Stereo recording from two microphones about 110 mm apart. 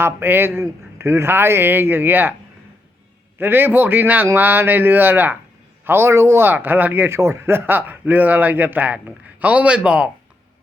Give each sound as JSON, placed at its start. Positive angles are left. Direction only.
{"t": 0.0, "sound": "speech", "side_deg": -20}
{"t": 3.3, "sound": "speech", "side_deg": -20}